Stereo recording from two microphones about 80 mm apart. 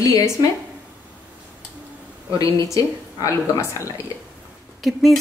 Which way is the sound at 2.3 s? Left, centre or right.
Left.